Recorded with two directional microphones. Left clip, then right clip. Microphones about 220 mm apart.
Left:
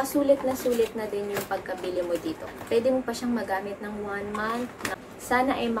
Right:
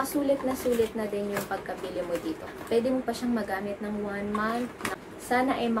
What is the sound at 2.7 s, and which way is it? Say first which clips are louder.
Speech: left 2 dB; 5° left (ahead or behind).